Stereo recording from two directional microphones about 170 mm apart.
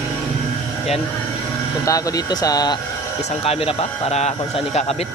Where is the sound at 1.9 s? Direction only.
20° left (ahead or behind).